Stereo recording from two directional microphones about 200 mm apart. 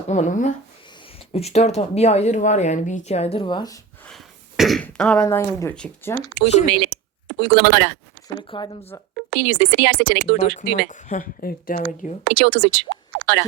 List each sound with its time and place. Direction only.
0.1 s speech: 35° left (ahead or behind); by 3.8 s 20° left (ahead or behind)
4.1 s speech: centre (ahead or behind)
6.4 s speech: 60° right (ahead or behind)
6.9 s a sound: 60° right (ahead or behind)
8.4 s speech: 25° left (ahead or behind)
9.1 s speech: 65° right (ahead or behind)
10.8 s speech: 40° left (ahead or behind)
12.2 s speech: 65° right (ahead or behind)